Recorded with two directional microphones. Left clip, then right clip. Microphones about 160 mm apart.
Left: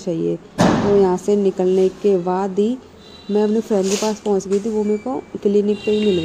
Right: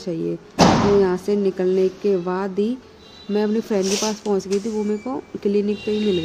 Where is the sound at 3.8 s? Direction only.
25° right (ahead or behind).